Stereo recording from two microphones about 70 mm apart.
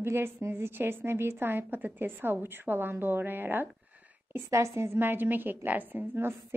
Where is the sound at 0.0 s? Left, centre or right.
Right.